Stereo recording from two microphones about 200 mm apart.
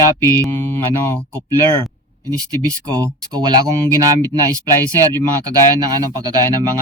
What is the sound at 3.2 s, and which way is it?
Speech, 20° right (ahead or behind).